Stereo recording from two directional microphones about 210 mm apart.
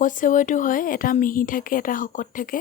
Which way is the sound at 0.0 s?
40° left (ahead or behind).